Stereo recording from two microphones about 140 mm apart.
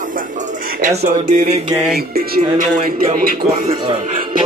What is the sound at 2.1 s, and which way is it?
Speech, 90° right.